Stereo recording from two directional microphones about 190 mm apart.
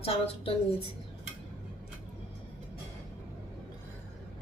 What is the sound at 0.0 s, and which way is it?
Speech, 30° left (ahead or behind).